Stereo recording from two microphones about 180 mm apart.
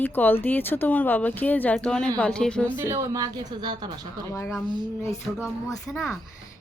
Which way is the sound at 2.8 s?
20° right (ahead or behind).